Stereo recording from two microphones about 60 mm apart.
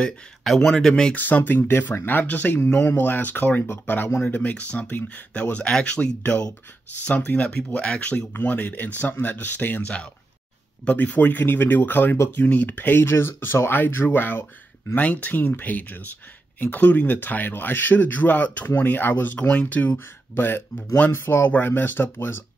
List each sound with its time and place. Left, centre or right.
0.7 s speech: centre
1.1 s speech: left
8.3 s speech: left
10.9 s speech: left
21.5 s speech: left